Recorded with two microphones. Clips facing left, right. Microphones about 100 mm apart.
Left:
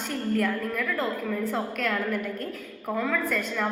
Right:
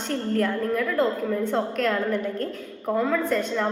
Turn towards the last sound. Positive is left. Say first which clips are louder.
# right 4 dB
turn(degrees=-25)  # may be behind; listen again after turning